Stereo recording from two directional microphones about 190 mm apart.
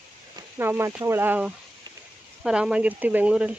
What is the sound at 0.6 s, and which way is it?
Speech, 15° right (ahead or behind).